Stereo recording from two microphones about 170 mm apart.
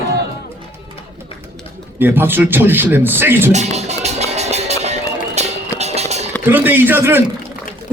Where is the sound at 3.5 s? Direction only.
40° right (ahead or behind).